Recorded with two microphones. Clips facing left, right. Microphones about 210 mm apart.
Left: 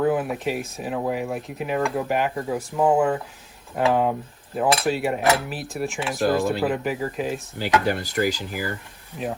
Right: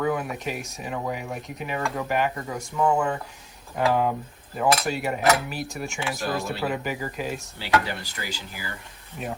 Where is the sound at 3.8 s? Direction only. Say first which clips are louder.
Left 2 dB; centre (ahead or behind).